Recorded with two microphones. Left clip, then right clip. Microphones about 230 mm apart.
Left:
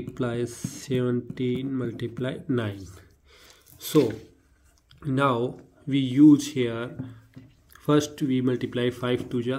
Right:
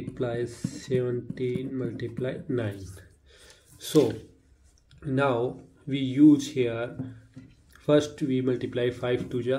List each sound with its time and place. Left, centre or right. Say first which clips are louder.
0.1 s speech: left 1 dB; left
5.0 s speech: left 1 dB; left